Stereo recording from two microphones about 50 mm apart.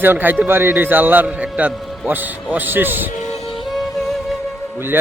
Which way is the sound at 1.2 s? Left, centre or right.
Right.